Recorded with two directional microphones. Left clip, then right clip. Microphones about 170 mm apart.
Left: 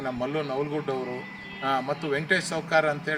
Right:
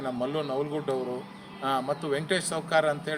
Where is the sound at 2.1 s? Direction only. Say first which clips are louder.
Left 4 dB; 30° right (ahead or behind).